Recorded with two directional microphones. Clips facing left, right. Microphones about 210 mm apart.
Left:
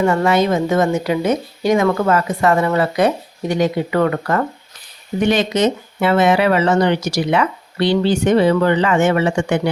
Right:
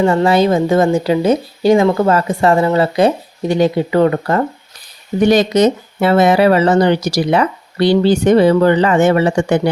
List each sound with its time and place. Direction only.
0.0 s speech: 30° right (ahead or behind)
5.2 s speech: 40° right (ahead or behind)